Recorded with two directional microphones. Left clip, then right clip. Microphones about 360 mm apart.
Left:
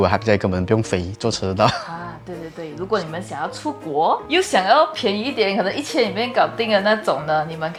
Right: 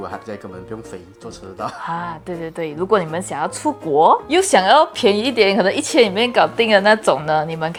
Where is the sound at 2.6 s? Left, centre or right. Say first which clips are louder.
Right 5 dB; right.